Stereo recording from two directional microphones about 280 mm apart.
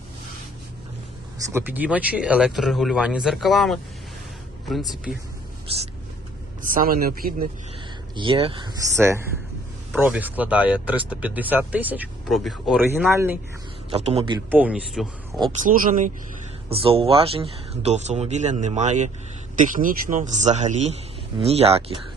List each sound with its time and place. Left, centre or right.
1.5 s speech: centre
5.6 s speech: right
8.1 s speech: centre
13.9 s speech: right
14.5 s speech: centre
15.6 s speech: right